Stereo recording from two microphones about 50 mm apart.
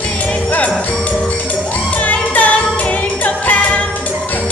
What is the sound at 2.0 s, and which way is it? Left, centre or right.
Music, left.